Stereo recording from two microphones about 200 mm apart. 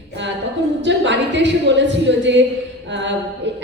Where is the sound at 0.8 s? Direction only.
65° right (ahead or behind).